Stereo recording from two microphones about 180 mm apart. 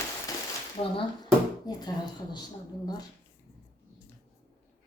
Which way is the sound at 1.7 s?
20° left (ahead or behind).